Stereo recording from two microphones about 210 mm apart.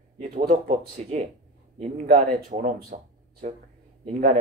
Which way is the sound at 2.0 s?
50° right (ahead or behind).